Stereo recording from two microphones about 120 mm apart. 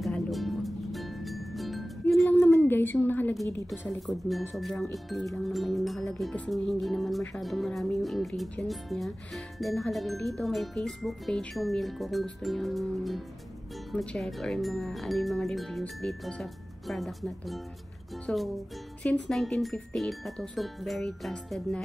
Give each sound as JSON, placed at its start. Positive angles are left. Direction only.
{"t": 0.0, "sound": "music", "side_deg": 0}
{"t": 2.3, "sound": "a sound", "side_deg": 20}
{"t": 3.4, "sound": "a woman's voice", "side_deg": 15}
{"t": 4.1, "sound": "speech", "side_deg": 0}